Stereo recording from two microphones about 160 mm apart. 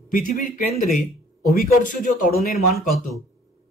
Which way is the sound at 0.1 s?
60° left (ahead or behind).